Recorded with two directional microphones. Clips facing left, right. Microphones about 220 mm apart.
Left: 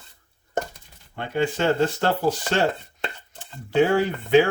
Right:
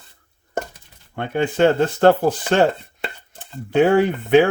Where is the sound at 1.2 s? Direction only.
55° right (ahead or behind).